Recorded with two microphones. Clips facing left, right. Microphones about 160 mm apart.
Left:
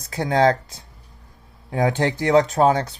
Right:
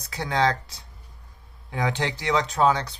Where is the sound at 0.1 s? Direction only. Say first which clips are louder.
Left 6 dB; 45° left (ahead or behind).